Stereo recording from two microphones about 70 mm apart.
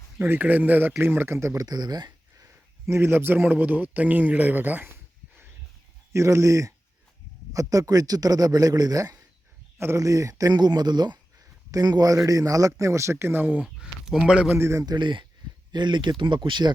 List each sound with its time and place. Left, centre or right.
0.2 s speech: right
1.6 s speech: right
2.4 s a man's voice: right
6.1 s a man's voice: right
9.7 s a man's voice: right
10.5 s speech: right
11.3 s a man's voice: right
13.7 s speech: centre
14.6 s a man's voice: right
14.8 s speech: right